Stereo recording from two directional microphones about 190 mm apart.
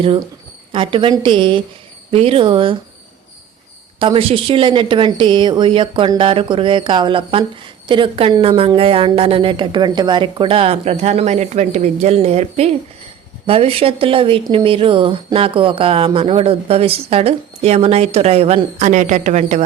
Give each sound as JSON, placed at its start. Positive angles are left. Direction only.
{"t": 0.0, "sound": "speech", "side_deg": -30}
{"t": 4.0, "sound": "a woman's voice", "side_deg": -30}